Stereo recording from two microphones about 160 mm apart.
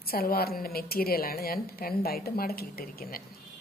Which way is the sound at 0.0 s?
70° left (ahead or behind).